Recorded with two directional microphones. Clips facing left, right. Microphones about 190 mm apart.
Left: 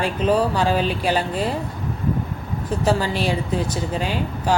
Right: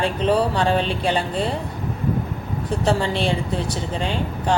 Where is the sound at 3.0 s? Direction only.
25° right (ahead or behind).